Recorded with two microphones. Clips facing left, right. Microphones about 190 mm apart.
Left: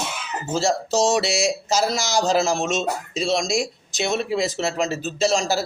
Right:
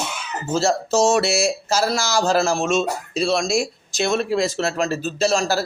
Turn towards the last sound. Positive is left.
turn(degrees=15)  # may be behind; listen again after turning